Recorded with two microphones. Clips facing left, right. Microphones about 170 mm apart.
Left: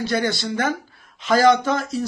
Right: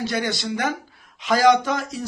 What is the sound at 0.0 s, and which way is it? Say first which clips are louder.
Speech: left 3 dB; 15° right (ahead or behind).